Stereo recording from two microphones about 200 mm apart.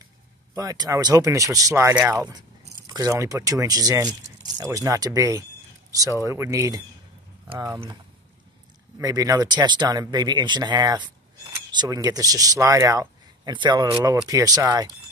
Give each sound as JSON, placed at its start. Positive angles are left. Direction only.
{"t": 0.6, "sound": "speech", "side_deg": -15}